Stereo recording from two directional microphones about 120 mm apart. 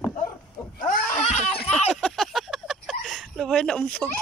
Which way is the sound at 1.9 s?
5° left (ahead or behind).